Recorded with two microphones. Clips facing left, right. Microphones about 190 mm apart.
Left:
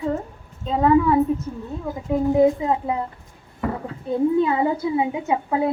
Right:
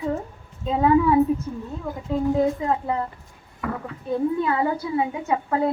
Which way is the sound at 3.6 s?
30° left (ahead or behind).